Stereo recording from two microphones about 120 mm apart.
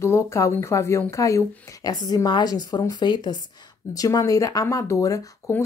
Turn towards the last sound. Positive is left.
turn(degrees=25)  # may be behind; listen again after turning